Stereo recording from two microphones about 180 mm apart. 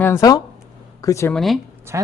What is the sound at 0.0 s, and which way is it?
Speech, 15° left (ahead or behind).